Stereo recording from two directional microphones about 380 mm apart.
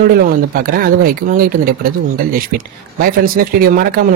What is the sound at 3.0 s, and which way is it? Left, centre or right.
Speech, right.